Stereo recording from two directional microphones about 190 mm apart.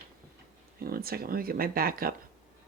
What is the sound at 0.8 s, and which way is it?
Speech, 50° right (ahead or behind).